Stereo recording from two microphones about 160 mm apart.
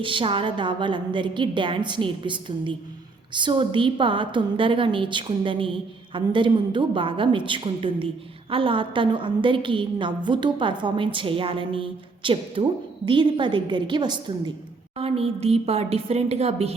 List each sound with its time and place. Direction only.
0.0 s a woman's voice: 30° right (ahead or behind)
14.9 s a woman's voice: 40° right (ahead or behind)